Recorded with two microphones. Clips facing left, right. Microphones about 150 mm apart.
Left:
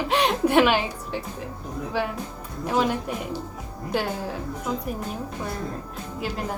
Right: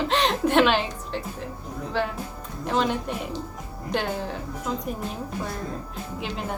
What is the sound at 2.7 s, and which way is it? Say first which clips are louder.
A woman's voice: left 1 dB; 10° left (ahead or behind).